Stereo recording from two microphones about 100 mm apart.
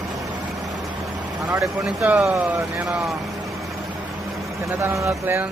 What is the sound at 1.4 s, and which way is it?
Speech, 30° right (ahead or behind).